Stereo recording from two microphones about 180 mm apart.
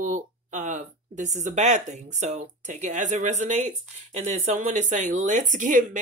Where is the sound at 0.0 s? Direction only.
40° right (ahead or behind).